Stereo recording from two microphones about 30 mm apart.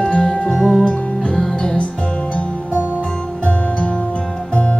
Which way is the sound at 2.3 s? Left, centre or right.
Left.